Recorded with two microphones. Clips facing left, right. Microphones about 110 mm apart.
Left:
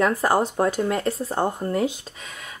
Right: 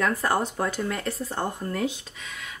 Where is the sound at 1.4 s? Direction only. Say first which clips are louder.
Left 5 dB; 25° left (ahead or behind).